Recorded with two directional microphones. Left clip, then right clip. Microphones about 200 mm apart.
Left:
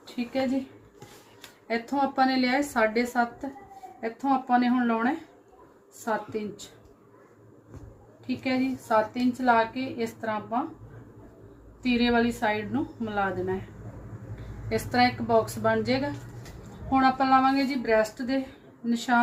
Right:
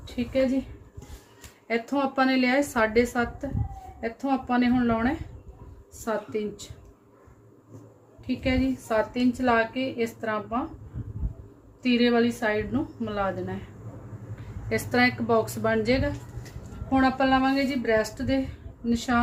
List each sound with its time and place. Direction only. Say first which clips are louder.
0.2 s speech: right 2 dB; 15° left (ahead or behind)
1.6 s a woman's voice: right 1 dB; 30° right (ahead or behind)
8.4 s a woman's voice: right 1 dB; 30° right (ahead or behind)
11.8 s a woman's voice: right 2 dB; 30° right (ahead or behind)
14.7 s a woman's voice: even; 35° right (ahead or behind)